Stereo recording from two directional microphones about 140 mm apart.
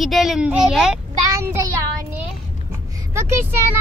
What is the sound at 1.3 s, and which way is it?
Child singing, 20° right (ahead or behind).